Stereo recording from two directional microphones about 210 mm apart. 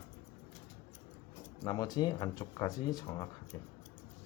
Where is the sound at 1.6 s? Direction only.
20° left (ahead or behind).